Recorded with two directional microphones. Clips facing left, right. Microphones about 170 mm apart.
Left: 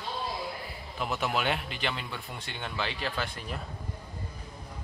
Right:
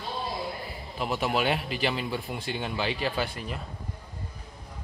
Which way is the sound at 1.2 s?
5° right (ahead or behind).